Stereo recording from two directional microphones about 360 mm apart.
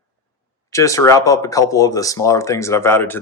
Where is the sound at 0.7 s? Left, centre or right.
Centre.